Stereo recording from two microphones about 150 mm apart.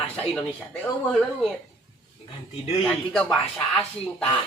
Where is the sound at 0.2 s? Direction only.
5° left (ahead or behind).